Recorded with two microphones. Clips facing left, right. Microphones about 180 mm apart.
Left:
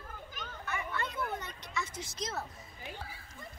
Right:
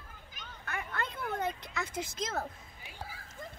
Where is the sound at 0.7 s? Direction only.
50° right (ahead or behind).